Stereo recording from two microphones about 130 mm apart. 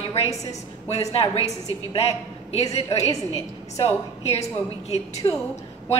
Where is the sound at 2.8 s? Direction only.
25° left (ahead or behind).